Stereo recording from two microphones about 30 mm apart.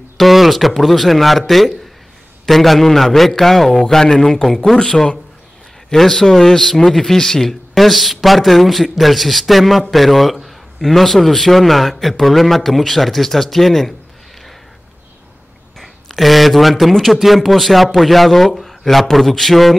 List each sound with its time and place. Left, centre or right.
0.2 s speech: centre
2.4 s a man's voice: centre
15.8 s a man's voice: centre